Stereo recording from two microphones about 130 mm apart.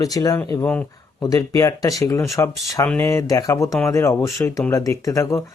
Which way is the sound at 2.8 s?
10° left (ahead or behind).